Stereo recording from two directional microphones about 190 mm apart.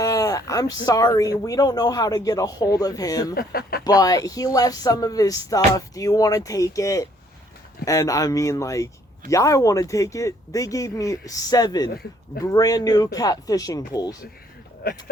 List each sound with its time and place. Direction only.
0.0 s speech: 15° left (ahead or behind)
3.3 s speech: 55° left (ahead or behind)
3.8 s speech: 20° left (ahead or behind)
14.8 s speech: 55° left (ahead or behind)